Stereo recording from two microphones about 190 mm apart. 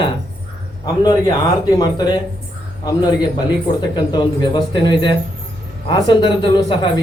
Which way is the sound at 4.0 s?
25° left (ahead or behind).